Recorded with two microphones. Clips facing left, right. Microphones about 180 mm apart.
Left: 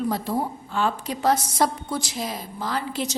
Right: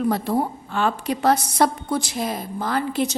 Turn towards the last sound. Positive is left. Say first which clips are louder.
# right 5 dB
turn(degrees=-55)  # may be behind; listen again after turning